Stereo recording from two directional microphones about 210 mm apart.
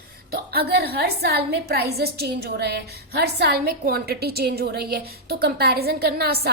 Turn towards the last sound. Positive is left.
turn(degrees=-45)  # may be behind; listen again after turning